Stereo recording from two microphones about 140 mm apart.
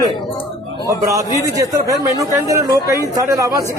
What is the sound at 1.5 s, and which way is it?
A man's voice, 25° right (ahead or behind).